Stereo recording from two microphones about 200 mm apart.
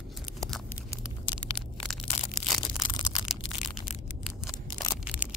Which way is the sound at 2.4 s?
Centre (ahead or behind).